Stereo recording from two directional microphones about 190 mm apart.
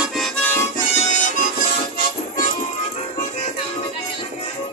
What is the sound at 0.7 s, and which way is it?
Harmonica, 40° left (ahead or behind).